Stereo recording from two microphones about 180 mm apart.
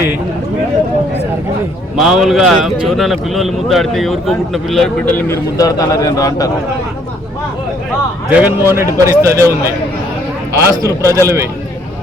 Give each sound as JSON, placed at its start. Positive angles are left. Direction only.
{"t": 2.0, "sound": "a man's voice", "side_deg": 0}
{"t": 8.3, "sound": "a man's voice", "side_deg": -10}
{"t": 10.6, "sound": "a man's voice", "side_deg": -15}